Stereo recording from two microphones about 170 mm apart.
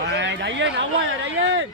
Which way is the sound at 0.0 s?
90° right.